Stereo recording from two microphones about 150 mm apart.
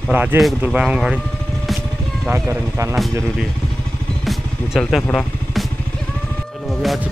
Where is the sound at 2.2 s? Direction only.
15° right (ahead or behind).